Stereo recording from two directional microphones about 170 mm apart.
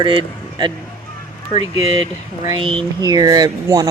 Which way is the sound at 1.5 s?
40° left (ahead or behind).